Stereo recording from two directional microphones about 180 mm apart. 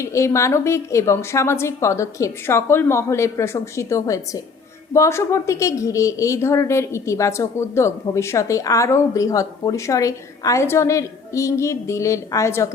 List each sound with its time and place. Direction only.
0.0 s a woman's voice: 15° left (ahead or behind)